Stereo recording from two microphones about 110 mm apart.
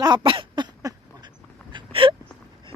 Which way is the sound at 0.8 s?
35° right (ahead or behind).